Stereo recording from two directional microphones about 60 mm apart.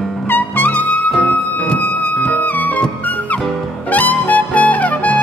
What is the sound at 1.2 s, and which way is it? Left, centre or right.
Music, left.